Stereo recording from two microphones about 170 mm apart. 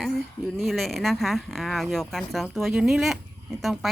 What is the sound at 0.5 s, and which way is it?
Speech, centre (ahead or behind).